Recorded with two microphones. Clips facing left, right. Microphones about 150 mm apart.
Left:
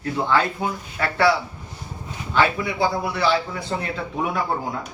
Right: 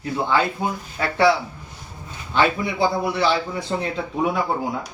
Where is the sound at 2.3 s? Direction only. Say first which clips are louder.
Right 1 dB; 20° right (ahead or behind).